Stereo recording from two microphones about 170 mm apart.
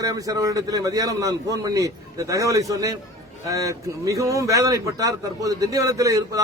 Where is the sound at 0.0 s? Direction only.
20° right (ahead or behind).